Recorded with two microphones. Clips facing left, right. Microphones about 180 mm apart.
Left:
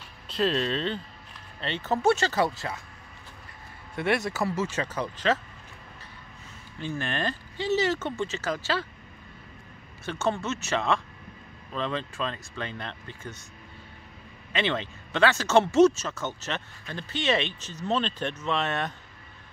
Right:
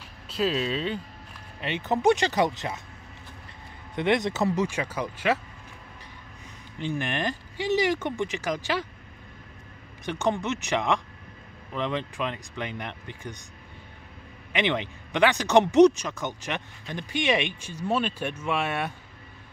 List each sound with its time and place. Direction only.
0.3 s speech: 5° right (ahead or behind)
3.9 s speech: 20° right (ahead or behind)
6.8 s speech: 15° right (ahead or behind)
10.0 s speech: 15° right (ahead or behind)
14.5 s speech: 15° right (ahead or behind)